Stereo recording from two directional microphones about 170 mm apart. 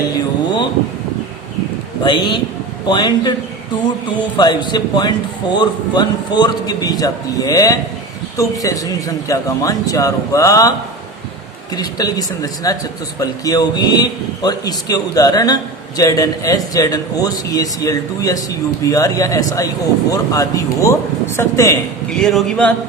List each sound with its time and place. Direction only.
2.0 s speech: 25° left (ahead or behind)
4.4 s speech: 25° left (ahead or behind)
22.2 s a man's voice: centre (ahead or behind)